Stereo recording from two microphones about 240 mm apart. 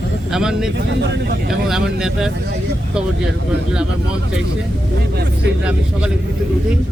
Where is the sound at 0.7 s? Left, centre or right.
Right.